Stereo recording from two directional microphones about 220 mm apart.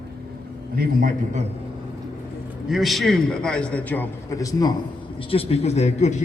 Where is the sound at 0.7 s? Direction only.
40° right (ahead or behind).